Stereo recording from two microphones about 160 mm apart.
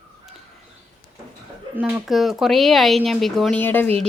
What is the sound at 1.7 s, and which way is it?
Speech, 10° right (ahead or behind).